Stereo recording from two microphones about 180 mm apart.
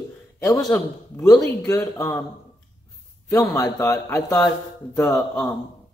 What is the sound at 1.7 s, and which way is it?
Speech, 20° left (ahead or behind).